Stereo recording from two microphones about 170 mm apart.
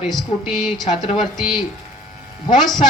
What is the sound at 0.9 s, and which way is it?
Speech, 40° left (ahead or behind).